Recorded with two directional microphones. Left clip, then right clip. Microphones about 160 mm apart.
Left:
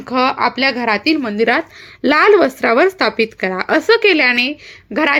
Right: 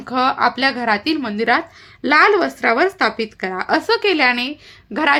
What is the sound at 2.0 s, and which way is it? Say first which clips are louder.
A woman's voice: left 3 dB; 30° left (ahead or behind).